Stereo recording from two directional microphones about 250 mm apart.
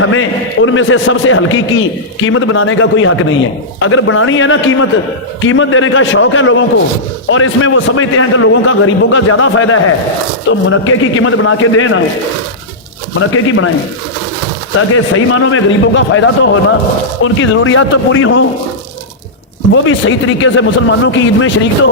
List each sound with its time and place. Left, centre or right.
0.0 s a man's voice: left
13.1 s speech: left
14.8 s a man's voice: left
19.7 s a man's voice: left